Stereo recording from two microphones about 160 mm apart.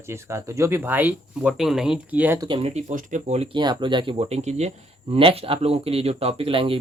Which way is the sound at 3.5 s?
30° right (ahead or behind).